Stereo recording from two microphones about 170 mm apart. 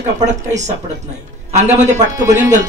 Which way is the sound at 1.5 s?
45° right (ahead or behind).